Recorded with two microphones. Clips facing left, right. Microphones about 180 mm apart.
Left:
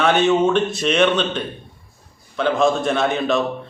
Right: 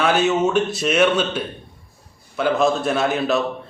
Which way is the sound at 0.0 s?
5° right (ahead or behind).